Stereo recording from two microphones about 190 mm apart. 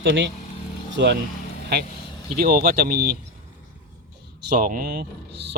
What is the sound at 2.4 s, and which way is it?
Speech, 50° right (ahead or behind).